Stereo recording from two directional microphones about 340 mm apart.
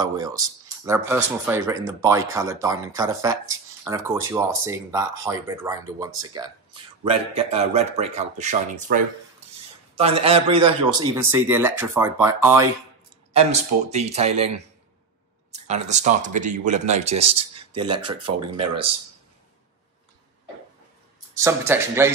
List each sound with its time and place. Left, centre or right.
0.0 s speech: centre
13.3 s speech: centre
21.4 s speech: centre